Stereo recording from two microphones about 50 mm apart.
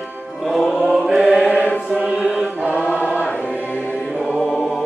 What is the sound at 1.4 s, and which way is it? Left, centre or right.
Choir, left.